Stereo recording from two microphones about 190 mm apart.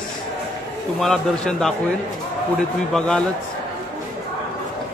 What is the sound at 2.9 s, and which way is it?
Speech, 5° left (ahead or behind).